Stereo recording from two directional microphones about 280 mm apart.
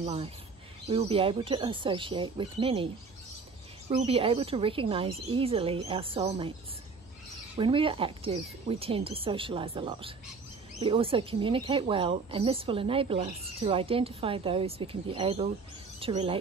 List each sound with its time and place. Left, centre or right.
0.0 s speech: right
3.9 s speech: centre
7.5 s speech: centre